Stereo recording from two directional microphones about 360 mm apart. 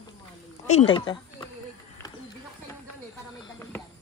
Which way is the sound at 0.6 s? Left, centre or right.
Centre.